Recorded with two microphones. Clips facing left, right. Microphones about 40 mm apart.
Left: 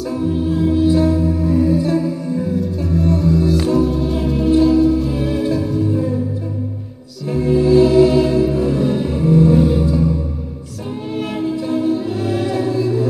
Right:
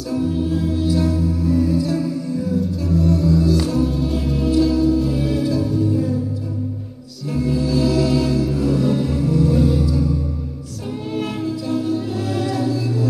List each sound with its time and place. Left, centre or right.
0.1 s music: centre
0.8 s music: left
3.8 s music: centre
4.5 s music: left
4.9 s music: centre
5.4 s music: left
7.3 s music: left
11.4 s music: left